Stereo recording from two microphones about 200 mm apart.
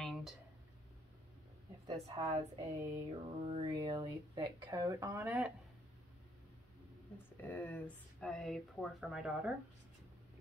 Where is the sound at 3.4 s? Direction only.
30° right (ahead or behind); by 5.5 s 10° right (ahead or behind).